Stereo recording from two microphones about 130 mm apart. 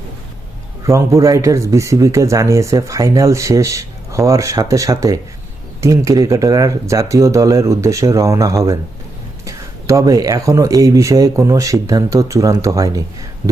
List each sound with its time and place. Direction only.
0.9 s speech: 20° right (ahead or behind)